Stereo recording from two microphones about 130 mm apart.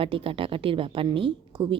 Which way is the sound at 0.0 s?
45° right (ahead or behind).